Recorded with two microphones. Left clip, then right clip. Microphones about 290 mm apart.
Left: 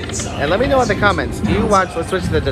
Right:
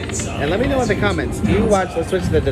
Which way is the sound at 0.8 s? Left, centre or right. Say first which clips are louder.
Left 4 dB; centre.